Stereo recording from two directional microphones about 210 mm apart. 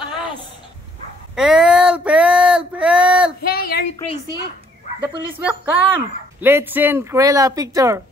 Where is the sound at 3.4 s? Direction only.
50° left (ahead or behind).